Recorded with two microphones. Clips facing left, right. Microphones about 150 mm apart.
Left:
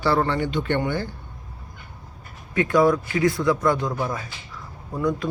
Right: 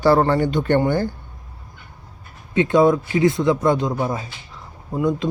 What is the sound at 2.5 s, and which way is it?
Speech, 25° right (ahead or behind).